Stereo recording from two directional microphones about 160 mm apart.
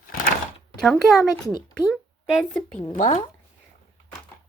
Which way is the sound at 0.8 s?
Centre (ahead or behind).